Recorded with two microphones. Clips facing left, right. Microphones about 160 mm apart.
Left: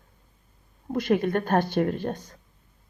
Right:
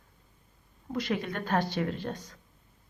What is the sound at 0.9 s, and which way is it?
A woman's voice, 50° left (ahead or behind).